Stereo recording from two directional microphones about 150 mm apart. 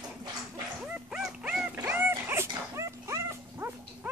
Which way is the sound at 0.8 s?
5° right (ahead or behind).